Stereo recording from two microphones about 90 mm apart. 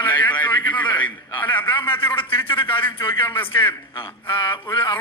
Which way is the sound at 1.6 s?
65° left (ahead or behind).